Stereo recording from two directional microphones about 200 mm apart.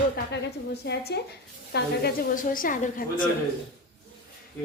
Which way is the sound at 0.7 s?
55° left (ahead or behind).